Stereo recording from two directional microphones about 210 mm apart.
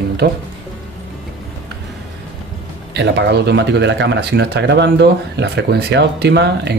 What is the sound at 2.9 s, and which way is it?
Speech, 55° right (ahead or behind).